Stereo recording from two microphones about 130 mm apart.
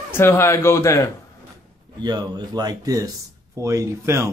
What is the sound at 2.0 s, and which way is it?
Speech, 30° right (ahead or behind).